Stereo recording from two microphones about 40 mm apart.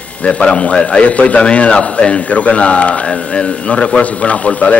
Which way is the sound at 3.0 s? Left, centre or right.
Left.